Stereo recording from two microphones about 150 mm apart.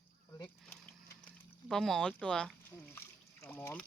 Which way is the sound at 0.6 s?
5° left (ahead or behind).